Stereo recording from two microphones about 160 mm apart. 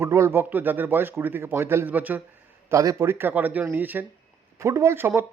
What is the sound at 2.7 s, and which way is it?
Speech, 20° right (ahead or behind).